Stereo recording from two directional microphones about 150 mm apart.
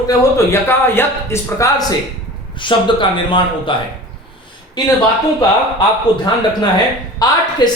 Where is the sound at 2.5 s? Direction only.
35° left (ahead or behind).